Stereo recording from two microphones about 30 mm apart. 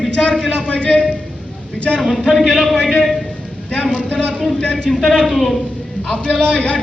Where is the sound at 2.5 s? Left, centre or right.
Centre.